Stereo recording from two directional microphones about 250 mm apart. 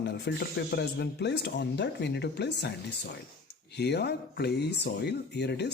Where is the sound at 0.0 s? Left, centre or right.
Left.